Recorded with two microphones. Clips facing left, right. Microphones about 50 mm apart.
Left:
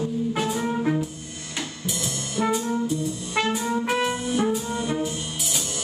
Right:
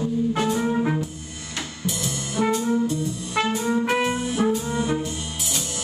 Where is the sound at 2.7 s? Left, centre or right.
Centre.